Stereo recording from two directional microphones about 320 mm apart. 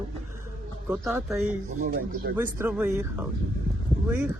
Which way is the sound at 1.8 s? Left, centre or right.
Right.